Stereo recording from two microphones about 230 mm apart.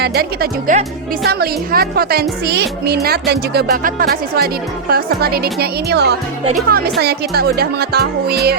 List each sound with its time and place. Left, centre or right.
0.0 s a woman's voice: right